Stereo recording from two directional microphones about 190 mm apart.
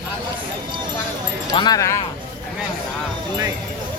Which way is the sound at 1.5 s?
20° left (ahead or behind).